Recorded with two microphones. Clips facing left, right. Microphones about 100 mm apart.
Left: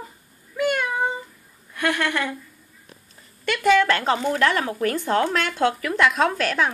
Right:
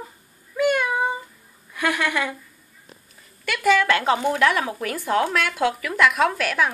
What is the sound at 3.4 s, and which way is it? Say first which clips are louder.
Speech: left 1 dB; 5° right (ahead or behind).